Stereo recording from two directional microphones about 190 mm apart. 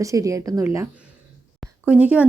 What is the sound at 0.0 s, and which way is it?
A woman's voice, 15° right (ahead or behind).